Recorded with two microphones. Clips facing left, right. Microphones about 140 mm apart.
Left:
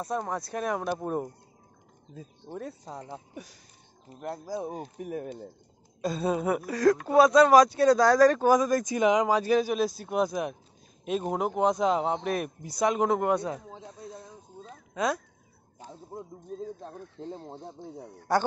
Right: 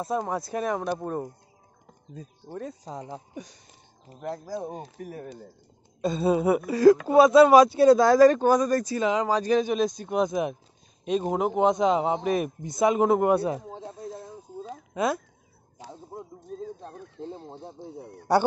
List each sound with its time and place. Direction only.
0.0 s speech: 5° right (ahead or behind)
2.5 s speech: centre (ahead or behind)
4.1 s speech: centre (ahead or behind)
4.9 s speech: 20° left (ahead or behind)
5.9 s speech: centre (ahead or behind)
8.5 s speech: 10° left (ahead or behind); by 13.6 s 5° right (ahead or behind)
13.6 s snake: 30° right (ahead or behind)
14.0 s snake: 5° right (ahead or behind)
15.0 s speech: centre (ahead or behind)
15.8 s a sound: 90° right